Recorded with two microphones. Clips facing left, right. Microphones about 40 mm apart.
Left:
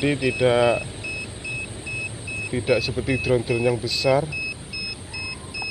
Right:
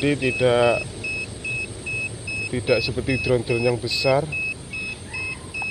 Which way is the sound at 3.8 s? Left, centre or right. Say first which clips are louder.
Even; centre.